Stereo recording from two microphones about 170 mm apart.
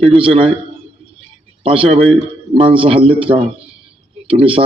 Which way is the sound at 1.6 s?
35° right (ahead or behind).